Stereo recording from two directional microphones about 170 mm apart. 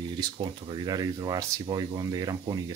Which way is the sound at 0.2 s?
25° right (ahead or behind).